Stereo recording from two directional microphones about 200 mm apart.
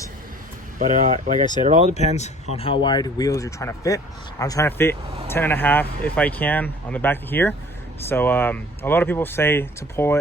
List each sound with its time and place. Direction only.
0.8 s speech: 40° right (ahead or behind)
1.9 s speech: 35° left (ahead or behind); by 10.2 s 10° left (ahead or behind)